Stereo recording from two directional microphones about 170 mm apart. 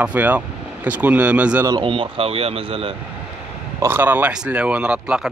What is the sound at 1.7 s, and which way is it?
Speech, 30° right (ahead or behind).